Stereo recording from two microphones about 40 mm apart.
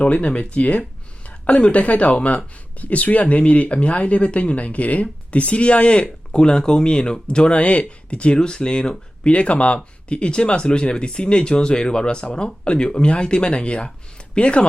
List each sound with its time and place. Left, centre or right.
0.0 s speech: left